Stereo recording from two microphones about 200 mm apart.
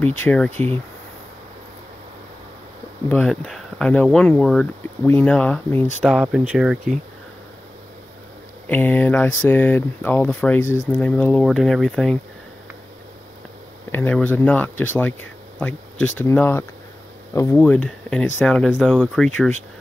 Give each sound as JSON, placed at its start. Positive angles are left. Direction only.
{"t": 0.2, "sound": "speech", "side_deg": 10}
{"t": 3.1, "sound": "speech", "side_deg": 0}
{"t": 6.0, "sound": "speech", "side_deg": -5}
{"t": 8.6, "sound": "speech", "side_deg": 10}
{"t": 13.9, "sound": "speech", "side_deg": 10}